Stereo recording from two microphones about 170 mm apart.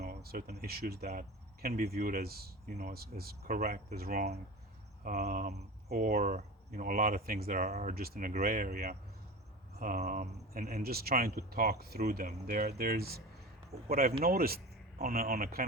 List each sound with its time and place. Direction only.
0.1 s speech: 65° right (ahead or behind); by 3.9 s 45° right (ahead or behind)
3.9 s speech: 60° right (ahead or behind)
5.0 s speech: 50° right (ahead or behind)
7.6 s speech: 45° right (ahead or behind)
7.9 s speech: 65° right (ahead or behind)
8.3 s speech: 50° right (ahead or behind)